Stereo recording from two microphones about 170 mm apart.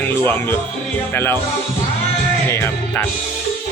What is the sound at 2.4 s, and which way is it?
Music, 15° left (ahead or behind).